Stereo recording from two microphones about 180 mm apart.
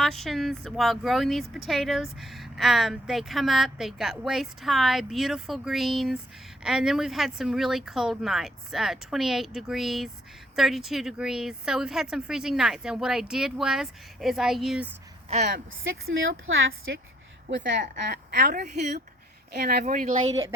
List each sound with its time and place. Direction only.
0.0 s a woman's voice: centre (ahead or behind)
15.4 s speech: 75° right (ahead or behind)
17.5 s a woman's voice: 80° right
18.8 s speech: 45° right (ahead or behind)
19.5 s speech: 60° right (ahead or behind)
19.8 s speech: 45° right (ahead or behind)